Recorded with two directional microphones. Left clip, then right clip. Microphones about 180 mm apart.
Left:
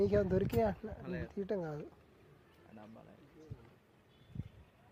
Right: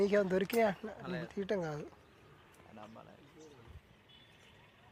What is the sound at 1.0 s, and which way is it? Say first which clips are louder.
Speech: right 2 dB; 65° left (ahead or behind).